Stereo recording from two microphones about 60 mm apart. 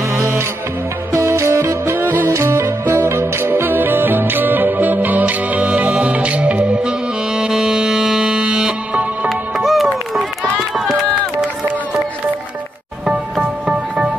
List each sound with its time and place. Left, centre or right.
0.1 s music: right
2.0 s music: right
2.2 s music: right; by 9.0 s centre
9.3 s music: centre
10.7 s run: centre
13.0 s music: centre